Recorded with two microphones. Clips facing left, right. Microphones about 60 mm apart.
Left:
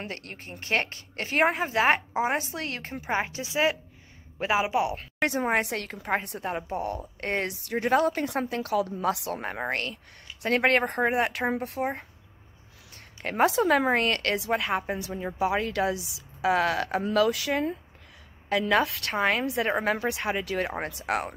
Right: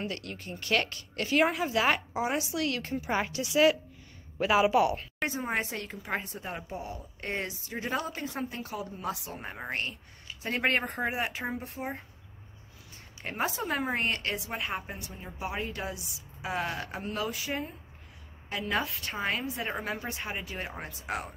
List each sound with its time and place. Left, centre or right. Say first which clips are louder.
0.0 s a woman's voice: right 1 dB; left; by 4.9 s centre
5.2 s a woman's voice: left 7 dB; left
11.8 s speech: left 7 dB; left
13.2 s a woman's voice: left 9 dB; left
18.5 s a woman's voice: left 8 dB; left